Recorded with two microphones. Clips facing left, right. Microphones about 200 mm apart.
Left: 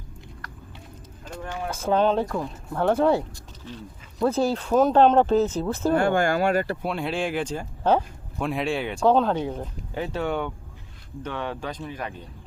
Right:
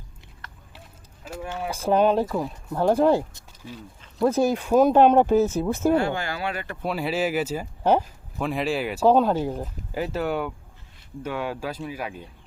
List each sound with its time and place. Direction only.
1.2 s speech: 5° right (ahead or behind)
6.0 s speech: 50° left (ahead or behind)
6.8 s speech: 5° right (ahead or behind)